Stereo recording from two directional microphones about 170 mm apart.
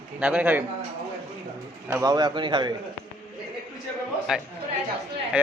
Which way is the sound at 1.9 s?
20° right (ahead or behind).